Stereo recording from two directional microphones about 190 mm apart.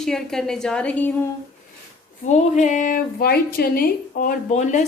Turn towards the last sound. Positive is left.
turn(degrees=40)  # may be behind; listen again after turning